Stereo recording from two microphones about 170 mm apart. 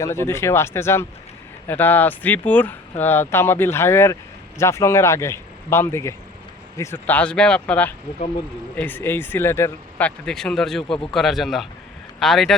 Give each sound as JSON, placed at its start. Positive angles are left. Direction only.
{"t": 0.0, "sound": "speech", "side_deg": 15}
{"t": 10.2, "sound": "speech", "side_deg": 5}